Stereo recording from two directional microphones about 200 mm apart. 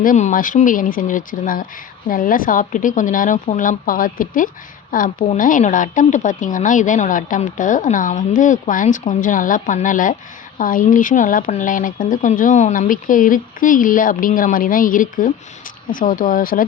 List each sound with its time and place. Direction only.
0.0 s a woman's voice: 40° left (ahead or behind)